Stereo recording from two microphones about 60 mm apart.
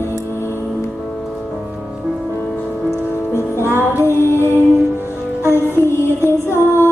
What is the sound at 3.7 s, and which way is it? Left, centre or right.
Music, left.